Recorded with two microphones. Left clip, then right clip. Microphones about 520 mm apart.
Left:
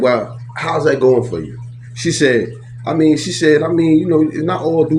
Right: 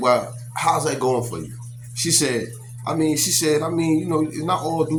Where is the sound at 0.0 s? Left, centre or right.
Right.